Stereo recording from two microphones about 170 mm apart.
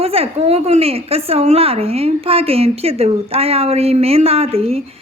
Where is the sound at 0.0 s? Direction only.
35° right (ahead or behind).